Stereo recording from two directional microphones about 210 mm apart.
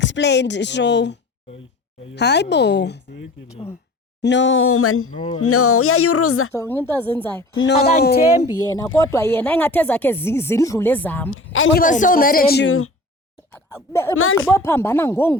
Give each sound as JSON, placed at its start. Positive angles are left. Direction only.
{"t": 0.0, "sound": "a woman's voice", "side_deg": 55}
{"t": 6.5, "sound": "speech", "side_deg": 10}
{"t": 7.5, "sound": "a woman's voice", "side_deg": 65}
{"t": 8.5, "sound": "speech", "side_deg": 15}
{"t": 11.3, "sound": "speech", "side_deg": 70}
{"t": 11.8, "sound": "speech", "side_deg": 40}
{"t": 12.6, "sound": "speech", "side_deg": 80}
{"t": 13.5, "sound": "speech", "side_deg": 10}